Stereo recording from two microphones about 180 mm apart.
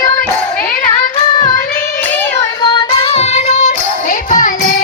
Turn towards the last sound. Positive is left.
turn(degrees=45)  # may be behind; listen again after turning